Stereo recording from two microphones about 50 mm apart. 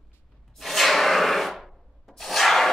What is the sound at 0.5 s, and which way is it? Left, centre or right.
Rub, centre.